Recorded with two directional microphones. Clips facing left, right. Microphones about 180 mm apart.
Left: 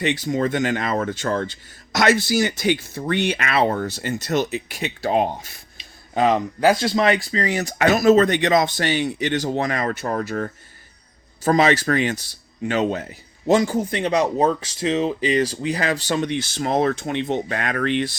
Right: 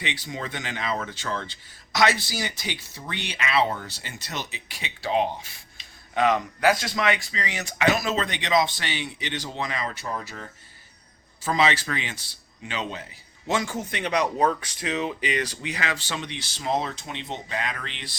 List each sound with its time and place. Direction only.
0.0 s speech: 45° left (ahead or behind)
6.1 s speech: 30° left (ahead or behind); by 18.2 s 50° left (ahead or behind)